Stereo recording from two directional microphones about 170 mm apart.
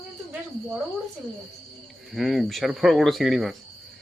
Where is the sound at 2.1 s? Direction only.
Centre (ahead or behind).